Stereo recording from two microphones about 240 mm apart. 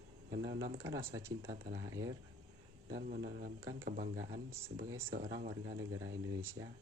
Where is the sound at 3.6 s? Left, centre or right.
Right.